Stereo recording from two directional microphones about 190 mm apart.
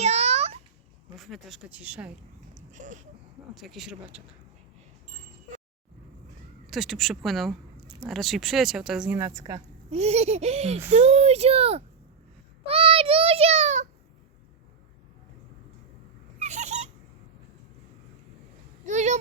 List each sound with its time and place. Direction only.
0.0 s a sound: 35° right (ahead or behind)
1.1 s speech: centre (ahead or behind)
2.6 s a sound: 40° right (ahead or behind)
3.5 s speech: centre (ahead or behind)
6.7 s speech: centre (ahead or behind); by 9.6 s 15° right (ahead or behind)
9.9 s speech: 35° right (ahead or behind)
12.6 s child singing: 30° right (ahead or behind)
16.4 s dog: 40° right (ahead or behind)
18.9 s a sound: 40° right (ahead or behind)